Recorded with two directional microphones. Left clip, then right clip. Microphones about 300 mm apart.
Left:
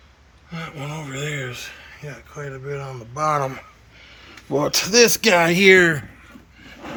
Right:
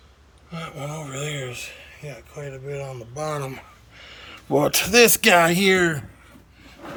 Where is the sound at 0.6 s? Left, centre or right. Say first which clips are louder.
Left 1 dB; centre.